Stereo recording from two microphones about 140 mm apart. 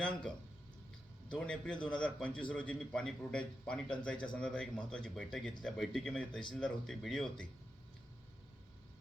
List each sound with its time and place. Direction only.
0.0 s speech: 5° left (ahead or behind)